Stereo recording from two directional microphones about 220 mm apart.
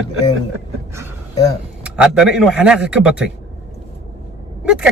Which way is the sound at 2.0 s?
5° right (ahead or behind).